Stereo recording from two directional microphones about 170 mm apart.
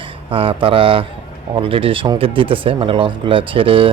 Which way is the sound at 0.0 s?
30° right (ahead or behind).